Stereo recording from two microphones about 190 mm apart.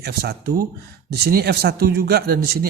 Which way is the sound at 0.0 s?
55° right (ahead or behind).